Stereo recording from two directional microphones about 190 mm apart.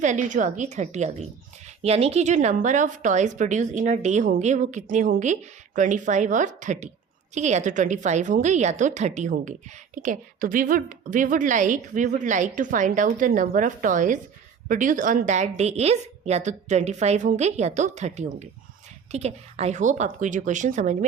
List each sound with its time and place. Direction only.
0.0 s a woman's voice: 40° right (ahead or behind)